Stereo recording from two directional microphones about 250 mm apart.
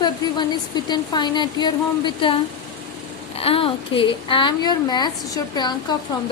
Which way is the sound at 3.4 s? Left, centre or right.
Left.